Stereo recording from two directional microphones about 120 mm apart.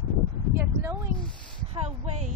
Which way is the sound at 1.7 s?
65° right (ahead or behind).